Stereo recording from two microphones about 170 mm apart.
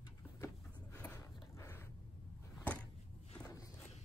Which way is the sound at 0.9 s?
10° left (ahead or behind).